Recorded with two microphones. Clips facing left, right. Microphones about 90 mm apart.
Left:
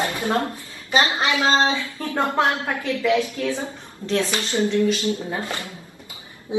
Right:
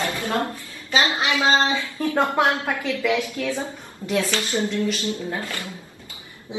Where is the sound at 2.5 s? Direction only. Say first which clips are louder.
Even; 25° left (ahead or behind).